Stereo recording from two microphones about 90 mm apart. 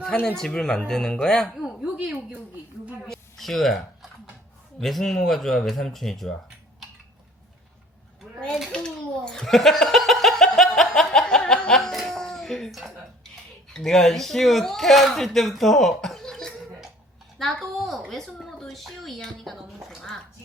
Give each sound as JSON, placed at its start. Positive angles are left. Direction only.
{"t": 0.3, "sound": "speech", "side_deg": 5}
{"t": 1.6, "sound": "a woman's voice", "side_deg": -10}
{"t": 3.1, "sound": "a sound", "side_deg": 0}
{"t": 4.8, "sound": "speech", "side_deg": 5}
{"t": 8.7, "sound": "laughter", "side_deg": 10}
{"t": 13.7, "sound": "a woman's voice", "side_deg": 5}